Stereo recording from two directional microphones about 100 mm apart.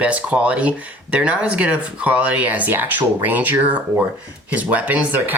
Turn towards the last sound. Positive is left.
turn(degrees=-15)  # may be behind; listen again after turning